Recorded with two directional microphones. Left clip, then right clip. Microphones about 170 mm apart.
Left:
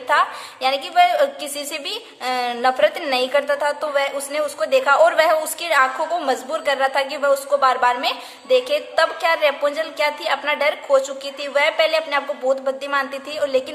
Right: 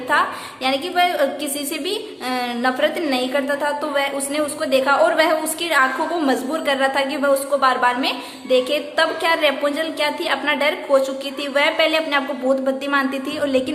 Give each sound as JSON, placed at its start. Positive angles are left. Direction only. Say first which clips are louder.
{"t": 0.1, "sound": "a woman's voice", "louder": "left 1 dB", "side_deg": 40}